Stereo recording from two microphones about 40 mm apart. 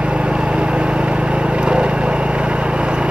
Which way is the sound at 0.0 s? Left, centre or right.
Right.